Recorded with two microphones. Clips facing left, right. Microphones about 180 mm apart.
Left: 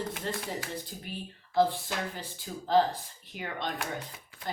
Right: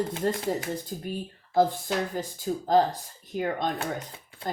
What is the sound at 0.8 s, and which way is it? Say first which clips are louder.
Speech: right 7 dB; 45° right (ahead or behind).